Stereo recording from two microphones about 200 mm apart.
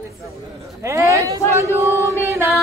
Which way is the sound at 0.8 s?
15° right (ahead or behind).